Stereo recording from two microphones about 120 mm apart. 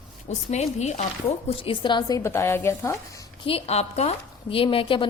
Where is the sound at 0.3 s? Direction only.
70° left (ahead or behind).